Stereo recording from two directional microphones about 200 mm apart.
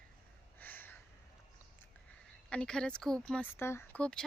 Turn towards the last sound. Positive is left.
turn(degrees=5)  # may be behind; listen again after turning